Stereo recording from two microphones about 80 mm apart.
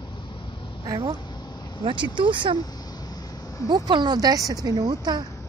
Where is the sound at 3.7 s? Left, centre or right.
Right.